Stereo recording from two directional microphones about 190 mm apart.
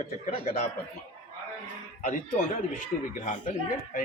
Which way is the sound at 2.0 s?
40° left (ahead or behind).